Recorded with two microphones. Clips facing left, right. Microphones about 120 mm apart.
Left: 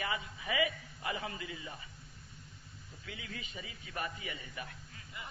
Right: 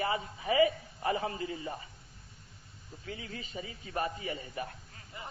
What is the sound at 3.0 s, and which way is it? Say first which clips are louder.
A man's voice: right 4 dB; 35° right (ahead or behind).